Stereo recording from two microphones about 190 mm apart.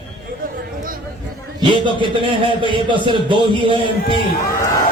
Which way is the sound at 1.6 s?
25° right (ahead or behind).